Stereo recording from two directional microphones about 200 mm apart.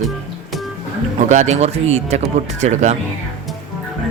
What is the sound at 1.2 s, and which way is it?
Speech, 35° right (ahead or behind).